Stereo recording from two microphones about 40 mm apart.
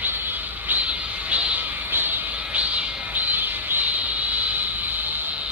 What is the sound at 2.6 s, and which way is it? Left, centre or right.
Music, right.